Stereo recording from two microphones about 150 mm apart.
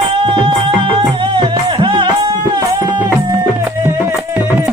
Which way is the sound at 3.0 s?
15° right (ahead or behind).